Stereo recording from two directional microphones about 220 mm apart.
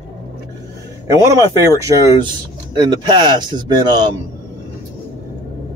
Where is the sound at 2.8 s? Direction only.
20° right (ahead or behind).